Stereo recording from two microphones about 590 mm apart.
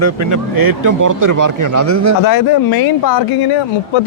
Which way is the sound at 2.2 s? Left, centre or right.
Left.